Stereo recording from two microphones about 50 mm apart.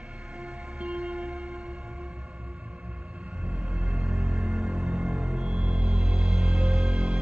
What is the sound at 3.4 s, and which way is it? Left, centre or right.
Music, right.